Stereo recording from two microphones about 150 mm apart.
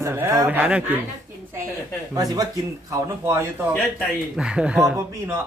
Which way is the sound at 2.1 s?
25° right (ahead or behind).